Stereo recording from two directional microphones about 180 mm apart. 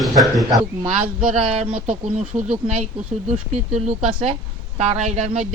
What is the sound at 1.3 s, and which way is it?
Speech, 35° right (ahead or behind).